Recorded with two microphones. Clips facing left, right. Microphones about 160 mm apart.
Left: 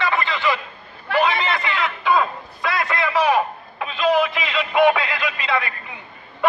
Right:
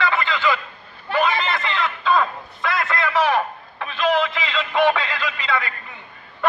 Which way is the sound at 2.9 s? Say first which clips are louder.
Left 1 dB; 15° left (ahead or behind).